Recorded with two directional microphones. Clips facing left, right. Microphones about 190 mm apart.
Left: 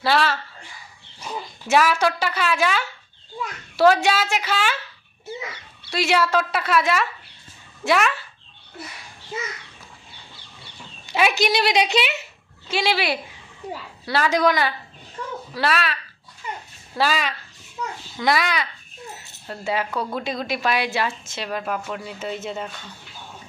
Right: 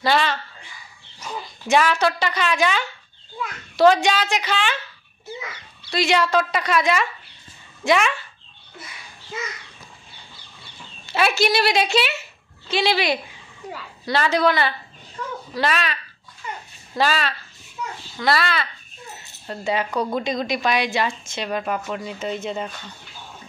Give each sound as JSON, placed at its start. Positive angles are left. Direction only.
{"t": 0.0, "sound": "a woman's voice", "side_deg": 5}
{"t": 5.9, "sound": "a woman's voice", "side_deg": 10}
{"t": 11.1, "sound": "a woman's voice", "side_deg": 15}
{"t": 17.0, "sound": "a woman's voice", "side_deg": 10}
{"t": 19.4, "sound": "a woman's voice", "side_deg": 5}